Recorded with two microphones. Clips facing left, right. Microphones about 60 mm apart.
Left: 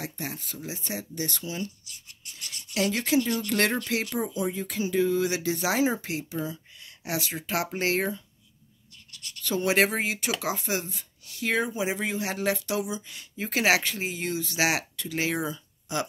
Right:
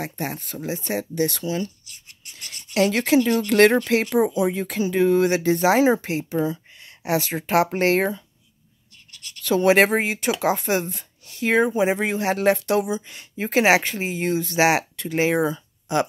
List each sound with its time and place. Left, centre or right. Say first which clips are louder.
0.0 s speech: right 7 dB; right
1.9 s rub: right 2 dB; right
4.1 s speech: right 9 dB; right
4.6 s speech: right 3 dB; right
6.2 s a sound: right 9 dB; right
7.1 s speech: right 8 dB; right
9.4 s speech: right 7 dB; right
10.4 s speech: right 8 dB; right
13.1 s speech: right 8 dB; right
15.3 s speech: right 9 dB; right